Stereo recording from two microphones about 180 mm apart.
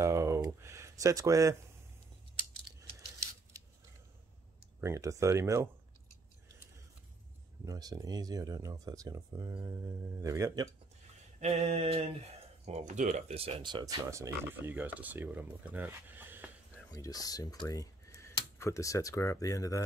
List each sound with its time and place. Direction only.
0.0 s a sound: 15° right (ahead or behind)
4.7 s speech: 15° right (ahead or behind)
7.6 s speech: 20° right (ahead or behind)
11.3 s mantra: 40° right (ahead or behind)
12.6 s speech: 40° right (ahead or behind); by 16.4 s 10° right (ahead or behind)
16.9 s speech: 20° left (ahead or behind)